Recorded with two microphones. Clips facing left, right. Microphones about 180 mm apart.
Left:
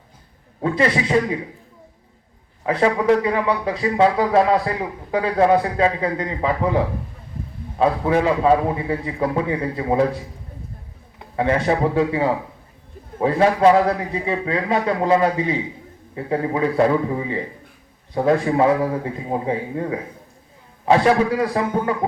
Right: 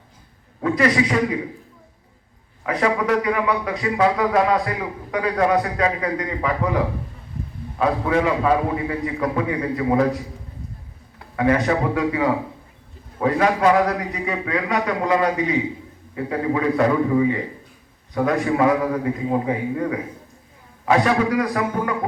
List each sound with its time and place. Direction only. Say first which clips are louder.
0.6 s speech: right 1 dB; 30° left (ahead or behind)
2.6 s speech: left 3 dB; 30° left (ahead or behind)
11.2 s speech: right 1 dB; 25° left (ahead or behind)